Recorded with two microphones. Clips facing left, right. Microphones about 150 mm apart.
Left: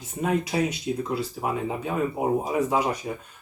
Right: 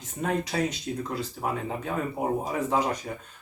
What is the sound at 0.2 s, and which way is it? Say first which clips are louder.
Speech: left 3 dB; 10° left (ahead or behind).